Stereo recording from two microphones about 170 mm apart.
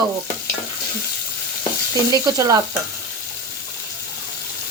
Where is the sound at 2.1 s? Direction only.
20° right (ahead or behind).